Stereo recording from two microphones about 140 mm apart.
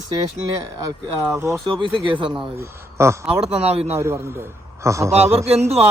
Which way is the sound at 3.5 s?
45° right (ahead or behind).